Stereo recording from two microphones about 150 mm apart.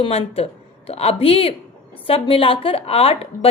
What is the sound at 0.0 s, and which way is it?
A woman's voice, 40° left (ahead or behind).